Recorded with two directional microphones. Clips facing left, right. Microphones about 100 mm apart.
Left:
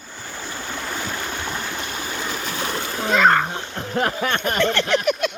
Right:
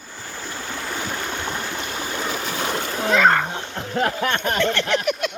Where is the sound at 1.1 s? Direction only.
15° right (ahead or behind).